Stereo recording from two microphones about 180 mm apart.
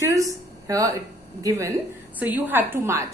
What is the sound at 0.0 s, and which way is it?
A woman's voice, 20° right (ahead or behind).